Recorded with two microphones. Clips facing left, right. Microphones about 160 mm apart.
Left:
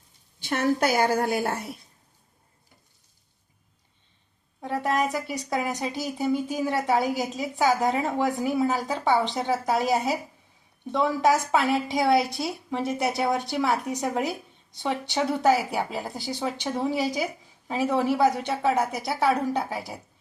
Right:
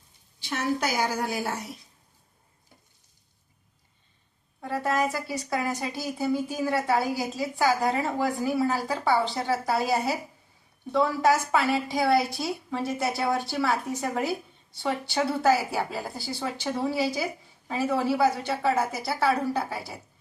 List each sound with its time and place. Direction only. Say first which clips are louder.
0.3 s a woman's voice: left 4 dB; 50° left (ahead or behind)
4.6 s speech: left 1 dB; 20° left (ahead or behind)